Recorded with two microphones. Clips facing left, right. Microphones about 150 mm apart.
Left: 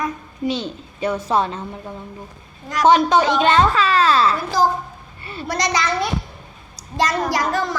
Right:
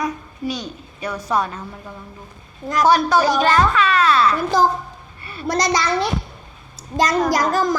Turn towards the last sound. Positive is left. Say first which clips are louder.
# right 3 dB
turn(degrees=-45)  # may be behind; listen again after turning